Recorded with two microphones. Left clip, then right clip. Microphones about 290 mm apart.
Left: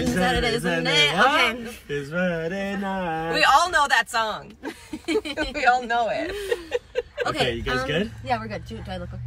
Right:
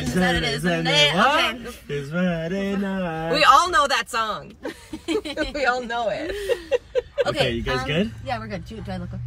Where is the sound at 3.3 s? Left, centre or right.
Centre.